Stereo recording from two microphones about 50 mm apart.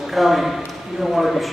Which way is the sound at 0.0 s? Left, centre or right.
Centre.